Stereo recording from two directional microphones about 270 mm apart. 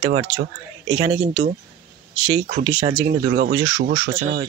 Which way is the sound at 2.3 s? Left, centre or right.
Centre.